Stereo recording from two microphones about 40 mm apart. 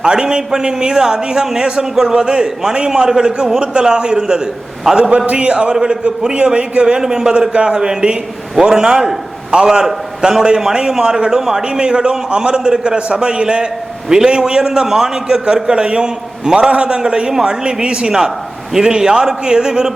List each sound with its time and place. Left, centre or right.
0.0 s a man's voice: centre
5.1 s a man's voice: right; by 19.9 s centre